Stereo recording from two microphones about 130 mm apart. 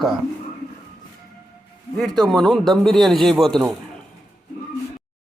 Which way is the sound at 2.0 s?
5° left (ahead or behind).